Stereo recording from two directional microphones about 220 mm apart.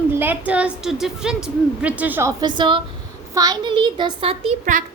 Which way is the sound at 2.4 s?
20° right (ahead or behind).